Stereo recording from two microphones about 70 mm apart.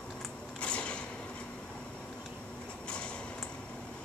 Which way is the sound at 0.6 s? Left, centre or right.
Centre.